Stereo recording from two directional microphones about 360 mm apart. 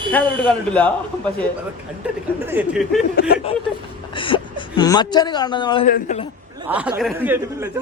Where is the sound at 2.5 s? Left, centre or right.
Centre.